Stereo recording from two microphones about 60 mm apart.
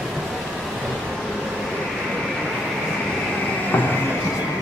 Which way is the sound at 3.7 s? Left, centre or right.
Left.